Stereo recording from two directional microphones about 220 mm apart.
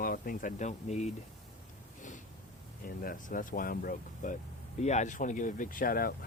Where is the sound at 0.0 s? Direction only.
40° left (ahead or behind).